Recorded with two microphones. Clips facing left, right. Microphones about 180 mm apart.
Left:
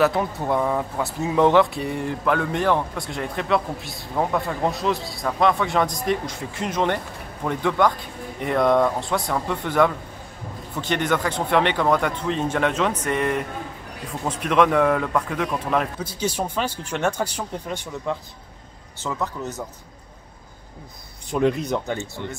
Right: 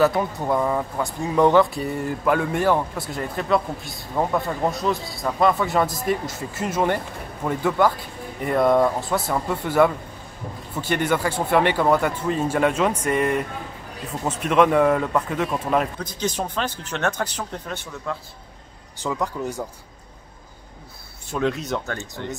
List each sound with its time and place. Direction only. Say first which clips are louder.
0.0 s speech: right 1 dB; centre (ahead or behind)
16.0 s speech: left 1 dB; 10° left (ahead or behind)
18.9 s speech: right 2 dB; 15° right (ahead or behind)
21.3 s speech: left 3 dB; 15° left (ahead or behind)